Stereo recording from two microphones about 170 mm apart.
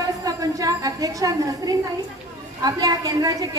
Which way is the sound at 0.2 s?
20° right (ahead or behind).